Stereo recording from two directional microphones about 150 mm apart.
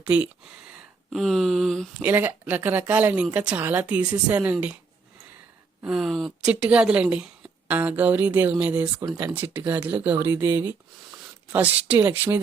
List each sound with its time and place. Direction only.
0.0 s speech: 10° right (ahead or behind)
1.1 s a woman's voice: centre (ahead or behind)
2.0 s speech: 10° right (ahead or behind)
5.8 s a woman's voice: centre (ahead or behind)
9.0 s speech: 25° right (ahead or behind)
9.3 s speech: 10° right (ahead or behind)